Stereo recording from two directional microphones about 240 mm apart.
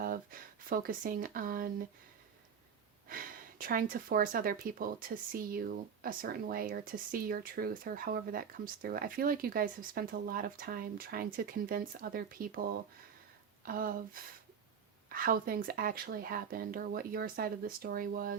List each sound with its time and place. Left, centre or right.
0.0 s speech: right
3.1 s speech: right